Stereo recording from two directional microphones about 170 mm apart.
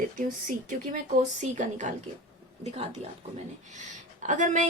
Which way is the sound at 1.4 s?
45° right (ahead or behind).